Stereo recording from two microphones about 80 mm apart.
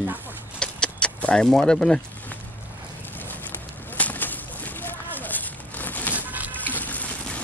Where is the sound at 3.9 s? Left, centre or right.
Left.